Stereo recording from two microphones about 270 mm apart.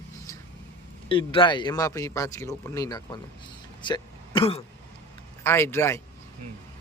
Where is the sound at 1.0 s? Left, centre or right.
Centre.